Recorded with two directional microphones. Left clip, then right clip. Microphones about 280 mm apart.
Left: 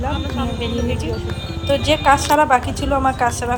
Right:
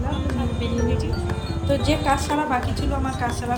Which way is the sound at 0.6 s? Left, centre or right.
Centre.